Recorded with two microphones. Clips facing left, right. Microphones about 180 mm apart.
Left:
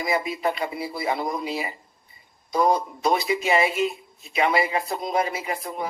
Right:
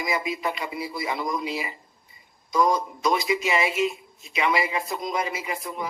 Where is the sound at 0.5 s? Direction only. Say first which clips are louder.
Left 2 dB; 55° left (ahead or behind).